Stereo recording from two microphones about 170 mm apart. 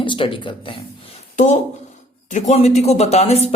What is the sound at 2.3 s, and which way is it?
Speech, 40° left (ahead or behind).